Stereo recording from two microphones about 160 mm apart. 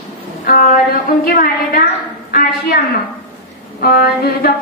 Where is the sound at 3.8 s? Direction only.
75° left (ahead or behind).